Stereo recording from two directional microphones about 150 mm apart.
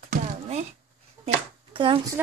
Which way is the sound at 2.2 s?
10° right (ahead or behind).